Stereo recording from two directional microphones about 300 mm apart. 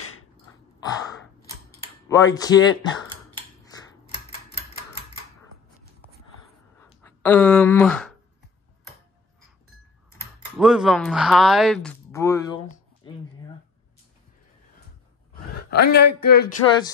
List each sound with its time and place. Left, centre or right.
2.0 s speech: centre
6.9 s speech: centre
10.6 s speech: centre
15.7 s speech: left